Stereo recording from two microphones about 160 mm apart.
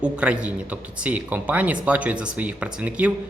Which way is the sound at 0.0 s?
5° right (ahead or behind).